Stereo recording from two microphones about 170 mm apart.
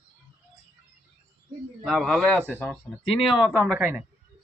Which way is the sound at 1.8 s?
Centre (ahead or behind).